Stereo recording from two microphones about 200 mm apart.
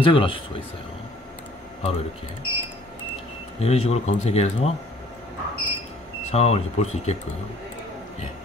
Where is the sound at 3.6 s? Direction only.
30° left (ahead or behind).